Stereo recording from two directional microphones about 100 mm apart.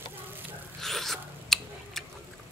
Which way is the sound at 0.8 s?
Centre (ahead or behind).